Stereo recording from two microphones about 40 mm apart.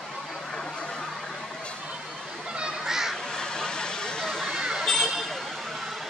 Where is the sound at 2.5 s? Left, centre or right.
Centre.